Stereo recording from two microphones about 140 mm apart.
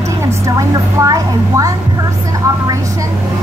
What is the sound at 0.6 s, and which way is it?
A woman's voice, 25° right (ahead or behind).